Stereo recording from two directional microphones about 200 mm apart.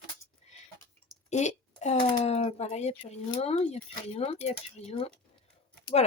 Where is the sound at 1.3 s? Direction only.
35° left (ahead or behind).